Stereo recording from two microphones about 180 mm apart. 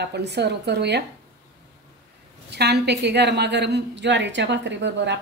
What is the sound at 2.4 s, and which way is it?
A woman's voice, 65° right (ahead or behind).